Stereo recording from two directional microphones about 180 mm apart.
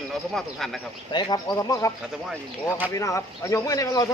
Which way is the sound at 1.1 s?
20° left (ahead or behind).